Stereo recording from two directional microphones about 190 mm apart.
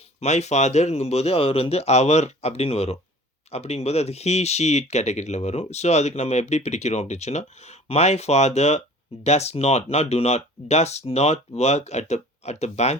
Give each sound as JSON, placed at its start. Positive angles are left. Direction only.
{"t": 0.2, "sound": "speech", "side_deg": 35}